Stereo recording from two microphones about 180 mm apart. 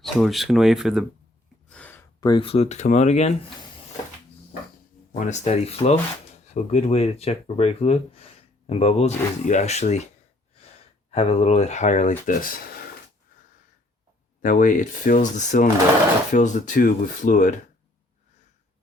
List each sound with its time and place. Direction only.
0.0 s speech: centre (ahead or behind)
1.7 s a sound: 10° left (ahead or behind)
2.2 s speech: 30° left (ahead or behind)
5.2 s speech: 40° left (ahead or behind)
11.1 s speech: 35° left (ahead or behind); by 12.8 s 50° left (ahead or behind)
14.4 s speech: 45° left (ahead or behind)